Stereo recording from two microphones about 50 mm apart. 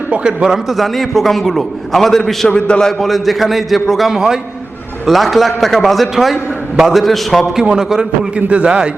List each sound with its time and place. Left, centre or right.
0.4 s a man's voice: centre
2.6 s a man's voice: centre
3.0 s a man's voice: centre
7.6 s a man's voice: centre
8.4 s a man's voice: right